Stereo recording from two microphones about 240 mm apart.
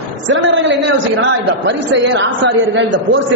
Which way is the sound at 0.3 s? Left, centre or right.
Right.